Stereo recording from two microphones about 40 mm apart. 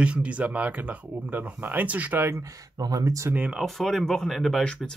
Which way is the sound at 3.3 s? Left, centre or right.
Right.